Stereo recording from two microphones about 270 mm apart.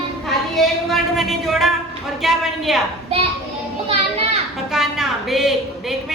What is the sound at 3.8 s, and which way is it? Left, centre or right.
Children playing, right.